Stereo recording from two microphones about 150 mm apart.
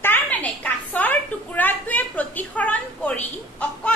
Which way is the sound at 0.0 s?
10° left (ahead or behind).